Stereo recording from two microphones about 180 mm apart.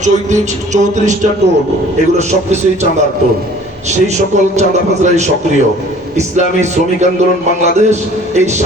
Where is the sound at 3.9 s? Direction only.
40° right (ahead or behind).